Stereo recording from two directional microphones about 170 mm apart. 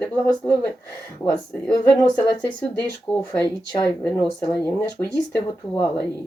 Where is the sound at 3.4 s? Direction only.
15° left (ahead or behind).